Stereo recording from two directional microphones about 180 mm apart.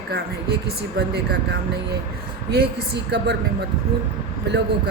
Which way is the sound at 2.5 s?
60° right (ahead or behind).